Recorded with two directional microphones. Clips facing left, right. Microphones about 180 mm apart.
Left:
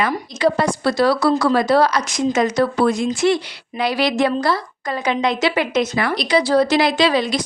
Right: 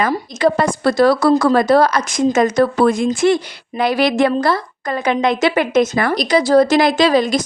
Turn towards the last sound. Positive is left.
turn(degrees=-45)  # may be behind; listen again after turning